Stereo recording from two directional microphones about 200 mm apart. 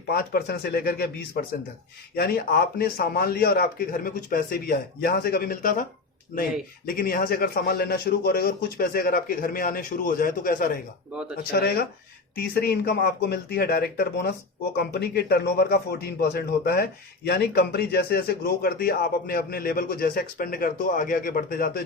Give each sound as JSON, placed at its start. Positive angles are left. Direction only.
{"t": 0.1, "sound": "a man's voice", "side_deg": 50}
{"t": 6.8, "sound": "a man's voice", "side_deg": 45}
{"t": 11.1, "sound": "speech", "side_deg": -5}
{"t": 11.5, "sound": "a man's voice", "side_deg": 50}